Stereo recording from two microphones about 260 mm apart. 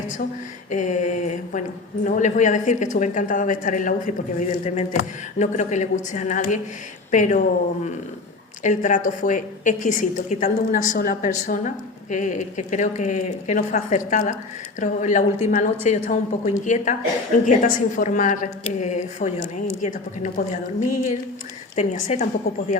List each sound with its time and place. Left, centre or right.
0.7 s speech: left
8.6 s speech: left